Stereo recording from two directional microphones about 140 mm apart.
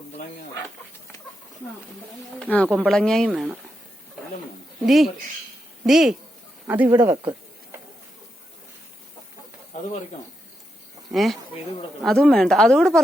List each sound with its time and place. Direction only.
2.4 s speech: 10° left (ahead or behind)
4.9 s speech: centre (ahead or behind)
6.7 s speech: 15° right (ahead or behind)
11.1 s speech: centre (ahead or behind)